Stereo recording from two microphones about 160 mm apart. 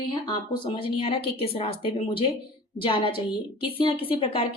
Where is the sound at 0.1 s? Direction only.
30° left (ahead or behind).